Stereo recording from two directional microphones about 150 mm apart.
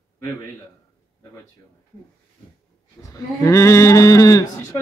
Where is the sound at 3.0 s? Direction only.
20° left (ahead or behind).